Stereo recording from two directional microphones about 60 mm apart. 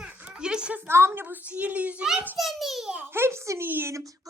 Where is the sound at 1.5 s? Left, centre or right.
Right.